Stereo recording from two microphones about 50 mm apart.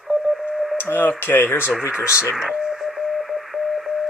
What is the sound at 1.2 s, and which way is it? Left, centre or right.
Speech, left.